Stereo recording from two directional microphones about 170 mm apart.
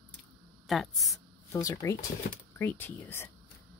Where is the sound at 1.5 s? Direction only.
20° left (ahead or behind).